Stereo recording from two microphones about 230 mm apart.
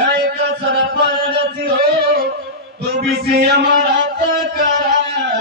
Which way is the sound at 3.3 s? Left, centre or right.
Right.